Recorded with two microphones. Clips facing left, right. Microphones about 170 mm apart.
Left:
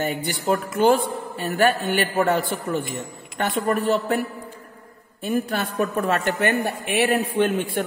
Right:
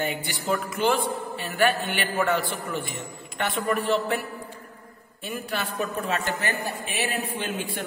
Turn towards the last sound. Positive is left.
turn(degrees=55)  # may be behind; listen again after turning